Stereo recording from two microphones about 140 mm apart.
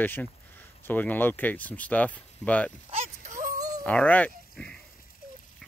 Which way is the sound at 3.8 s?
10° left (ahead or behind).